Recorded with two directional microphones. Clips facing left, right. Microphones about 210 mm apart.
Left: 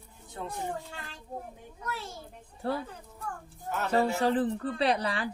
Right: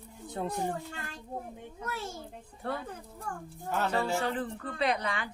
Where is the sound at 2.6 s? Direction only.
30° left (ahead or behind).